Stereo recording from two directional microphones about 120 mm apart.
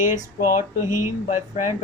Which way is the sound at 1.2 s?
85° left.